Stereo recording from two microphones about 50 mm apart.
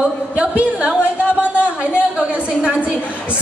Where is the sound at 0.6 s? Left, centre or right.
Right.